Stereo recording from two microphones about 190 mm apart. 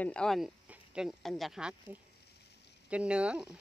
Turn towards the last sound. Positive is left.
turn(degrees=-5)  # may be behind; listen again after turning